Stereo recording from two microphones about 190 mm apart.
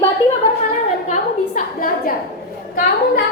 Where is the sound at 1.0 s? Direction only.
40° left (ahead or behind).